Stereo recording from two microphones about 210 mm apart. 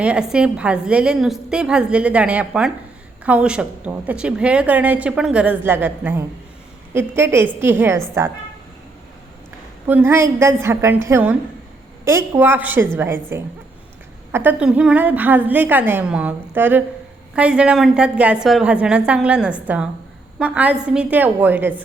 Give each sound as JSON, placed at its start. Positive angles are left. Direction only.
{"t": 0.0, "sound": "a woman's voice", "side_deg": -5}
{"t": 9.8, "sound": "a woman's voice", "side_deg": -10}